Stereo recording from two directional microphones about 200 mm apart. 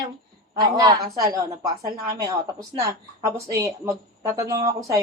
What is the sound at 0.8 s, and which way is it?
Speech, 20° right (ahead or behind).